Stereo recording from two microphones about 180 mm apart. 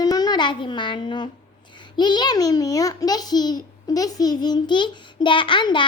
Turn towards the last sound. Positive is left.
turn(degrees=25)  # may be behind; listen again after turning